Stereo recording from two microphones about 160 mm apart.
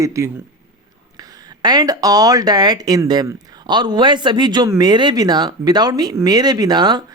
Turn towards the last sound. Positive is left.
turn(degrees=-25)  # may be behind; listen again after turning